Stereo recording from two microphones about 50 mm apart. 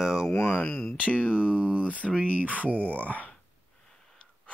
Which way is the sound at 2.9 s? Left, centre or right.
Left.